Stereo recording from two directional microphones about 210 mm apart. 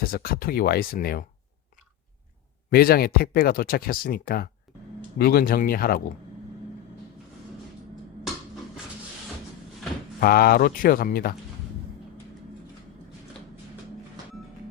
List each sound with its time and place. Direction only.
0.0 s speech: 45° left (ahead or behind)
2.6 s speech: 45° left (ahead or behind)
10.2 s speech: 45° left (ahead or behind)